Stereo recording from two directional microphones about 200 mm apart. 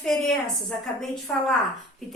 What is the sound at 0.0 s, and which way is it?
Speech, centre (ahead or behind).